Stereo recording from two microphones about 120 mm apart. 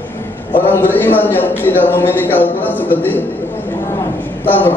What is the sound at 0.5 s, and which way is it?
A man's voice, 15° left (ahead or behind).